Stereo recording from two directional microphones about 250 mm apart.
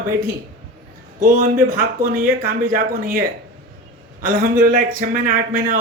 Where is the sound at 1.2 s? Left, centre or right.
Right.